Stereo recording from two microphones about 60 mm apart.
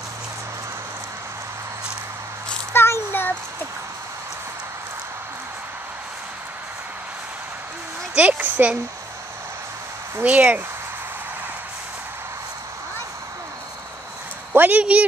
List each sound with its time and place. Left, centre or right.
2.7 s a sound: left
8.2 s a child's voice: right
10.2 s a child's voice: right
14.7 s a child's voice: right